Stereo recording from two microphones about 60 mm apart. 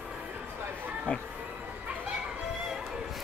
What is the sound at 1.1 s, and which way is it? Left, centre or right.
Speech, centre.